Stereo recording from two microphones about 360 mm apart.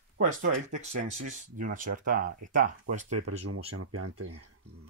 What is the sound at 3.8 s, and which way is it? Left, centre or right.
Speech, right.